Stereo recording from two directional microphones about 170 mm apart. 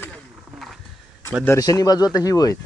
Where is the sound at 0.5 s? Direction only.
Centre (ahead or behind).